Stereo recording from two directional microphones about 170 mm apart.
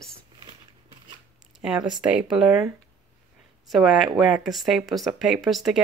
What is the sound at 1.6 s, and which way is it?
Speech, 5° right (ahead or behind).